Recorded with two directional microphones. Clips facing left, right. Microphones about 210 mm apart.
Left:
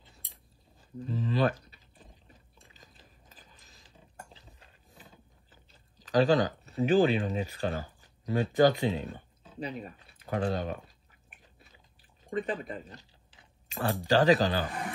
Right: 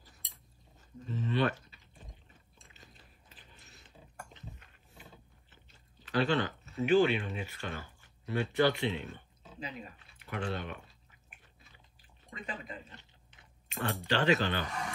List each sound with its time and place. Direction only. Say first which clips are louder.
0.9 s a sound: left 3 dB; 35° left (ahead or behind)
4.2 s dishes: right 2 dB; 35° left (ahead or behind)
6.2 s speech: left 6 dB; 40° left (ahead or behind)
12.3 s speech: left 10 dB; 45° left (ahead or behind)